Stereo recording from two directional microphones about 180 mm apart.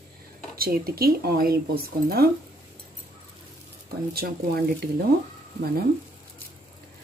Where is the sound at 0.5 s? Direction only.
55° right (ahead or behind).